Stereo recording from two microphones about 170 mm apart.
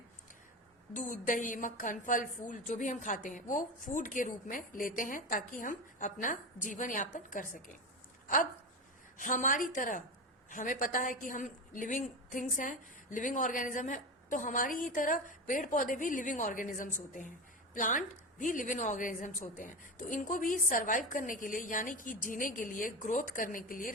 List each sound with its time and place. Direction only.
0.9 s a woman's voice: 50° left (ahead or behind)
9.1 s a woman's voice: 50° left (ahead or behind)